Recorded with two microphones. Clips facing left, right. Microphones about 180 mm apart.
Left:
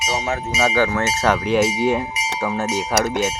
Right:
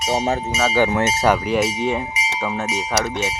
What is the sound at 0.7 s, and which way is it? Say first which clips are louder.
Cowbell: right 1 dB; 15° right (ahead or behind).